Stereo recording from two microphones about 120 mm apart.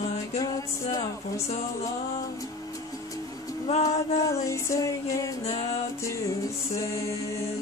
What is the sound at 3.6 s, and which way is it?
Music, 60° left (ahead or behind).